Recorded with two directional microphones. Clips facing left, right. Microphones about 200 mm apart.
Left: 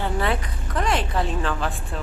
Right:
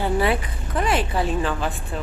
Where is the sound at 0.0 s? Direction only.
10° right (ahead or behind).